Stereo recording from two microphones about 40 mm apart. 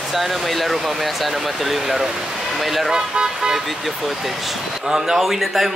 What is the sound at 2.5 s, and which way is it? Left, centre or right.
Music, centre.